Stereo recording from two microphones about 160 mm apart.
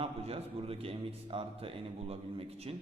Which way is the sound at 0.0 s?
35° right (ahead or behind).